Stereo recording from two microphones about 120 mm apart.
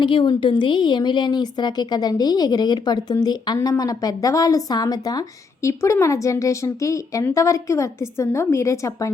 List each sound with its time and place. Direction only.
0.0 s a woman's voice: 40° left (ahead or behind); by 9.1 s 25° left (ahead or behind)